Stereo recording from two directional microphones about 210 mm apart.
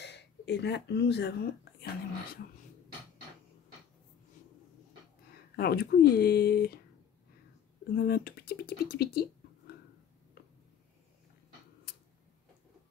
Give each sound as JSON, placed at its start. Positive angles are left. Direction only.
{"t": 0.0, "sound": "speech", "side_deg": 55}
{"t": 5.6, "sound": "speech", "side_deg": 50}
{"t": 7.9, "sound": "speech", "side_deg": 45}